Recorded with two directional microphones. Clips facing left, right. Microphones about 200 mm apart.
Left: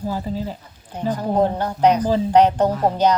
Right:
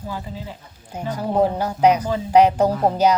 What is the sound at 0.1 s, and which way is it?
Speech, 40° left (ahead or behind).